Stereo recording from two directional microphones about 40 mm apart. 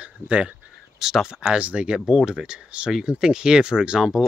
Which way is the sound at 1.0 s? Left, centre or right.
Centre.